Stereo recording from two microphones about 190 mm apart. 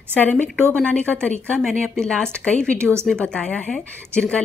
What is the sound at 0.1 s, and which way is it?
Speech, 10° left (ahead or behind).